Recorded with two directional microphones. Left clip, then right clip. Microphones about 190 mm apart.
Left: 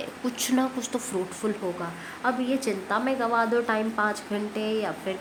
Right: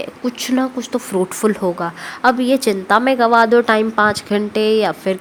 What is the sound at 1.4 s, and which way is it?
A woman's voice, 50° right (ahead or behind).